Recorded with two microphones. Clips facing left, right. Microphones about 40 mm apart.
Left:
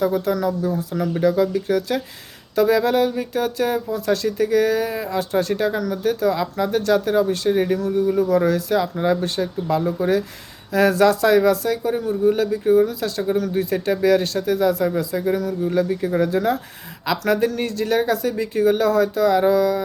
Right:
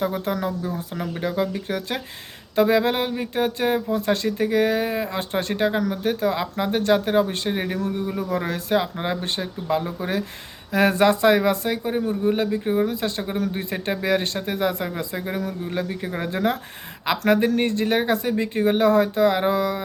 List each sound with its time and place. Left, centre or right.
0.0 s speech: right